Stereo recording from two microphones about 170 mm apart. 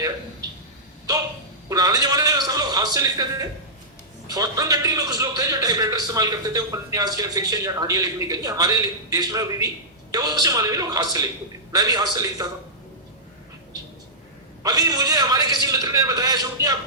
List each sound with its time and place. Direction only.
1.7 s a man's voice: 20° right (ahead or behind)
14.6 s a man's voice: 20° right (ahead or behind)